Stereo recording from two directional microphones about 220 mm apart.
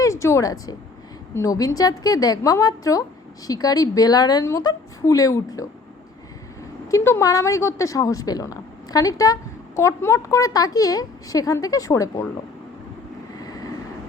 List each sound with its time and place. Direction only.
0.0 s a woman's voice: 15° left (ahead or behind)
6.9 s a woman's voice: 15° left (ahead or behind)